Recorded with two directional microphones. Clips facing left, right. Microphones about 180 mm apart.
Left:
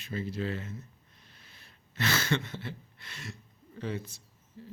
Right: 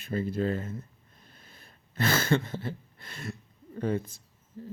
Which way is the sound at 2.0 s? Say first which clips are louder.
Right 4 dB; 50° right (ahead or behind).